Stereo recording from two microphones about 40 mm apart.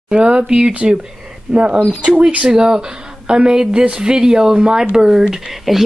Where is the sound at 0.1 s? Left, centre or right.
Right.